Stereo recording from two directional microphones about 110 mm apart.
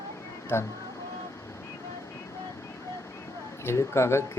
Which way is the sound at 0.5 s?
20° left (ahead or behind).